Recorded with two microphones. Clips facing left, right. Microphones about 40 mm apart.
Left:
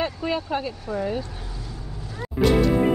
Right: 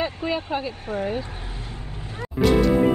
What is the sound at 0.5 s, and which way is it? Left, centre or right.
Speech, right.